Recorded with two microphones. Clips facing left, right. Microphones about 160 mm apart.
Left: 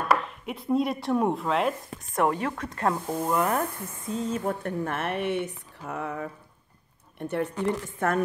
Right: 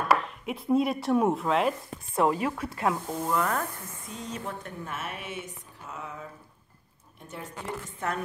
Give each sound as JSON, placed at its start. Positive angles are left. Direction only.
{"t": 0.1, "sound": "chopping", "side_deg": 0}
{"t": 2.3, "sound": "speech", "side_deg": -10}
{"t": 3.1, "sound": "speech", "side_deg": 10}
{"t": 4.1, "sound": "a sound", "side_deg": 40}
{"t": 4.6, "sound": "speech", "side_deg": 60}